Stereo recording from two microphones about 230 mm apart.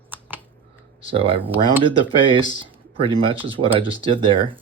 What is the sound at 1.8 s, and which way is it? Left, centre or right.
Speech, right.